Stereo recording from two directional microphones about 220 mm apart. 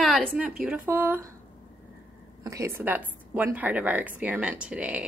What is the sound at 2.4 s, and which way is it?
A woman's voice, 15° right (ahead or behind).